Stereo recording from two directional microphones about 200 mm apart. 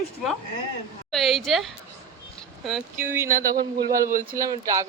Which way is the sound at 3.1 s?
10° right (ahead or behind).